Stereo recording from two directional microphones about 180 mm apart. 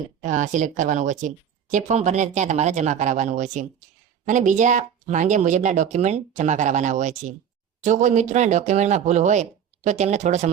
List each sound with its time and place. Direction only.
0.2 s speech: 45° right (ahead or behind)